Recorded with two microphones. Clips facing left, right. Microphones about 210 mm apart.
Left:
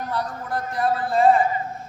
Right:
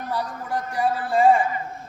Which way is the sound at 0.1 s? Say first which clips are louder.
Right 2 dB; 10° right (ahead or behind).